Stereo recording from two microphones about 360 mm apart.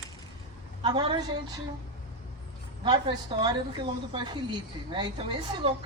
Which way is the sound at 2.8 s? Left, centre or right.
Centre.